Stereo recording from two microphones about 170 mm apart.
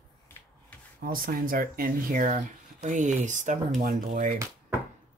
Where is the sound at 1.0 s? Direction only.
55° right (ahead or behind).